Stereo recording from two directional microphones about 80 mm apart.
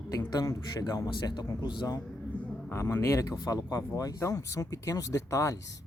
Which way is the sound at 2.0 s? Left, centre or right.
Centre.